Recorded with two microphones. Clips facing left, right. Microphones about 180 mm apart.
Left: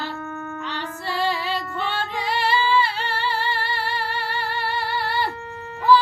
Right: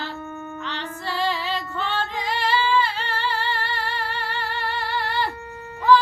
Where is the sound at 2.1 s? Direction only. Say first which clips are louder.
Left 3 dB; 10° left (ahead or behind).